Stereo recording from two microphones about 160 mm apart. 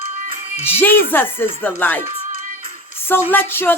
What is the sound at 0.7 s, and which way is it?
Speech, 15° left (ahead or behind).